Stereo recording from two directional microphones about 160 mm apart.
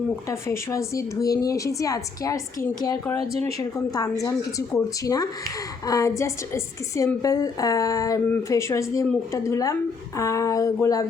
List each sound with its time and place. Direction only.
0.3 s speech: 20° left (ahead or behind)
3.6 s speech: 20° left (ahead or behind)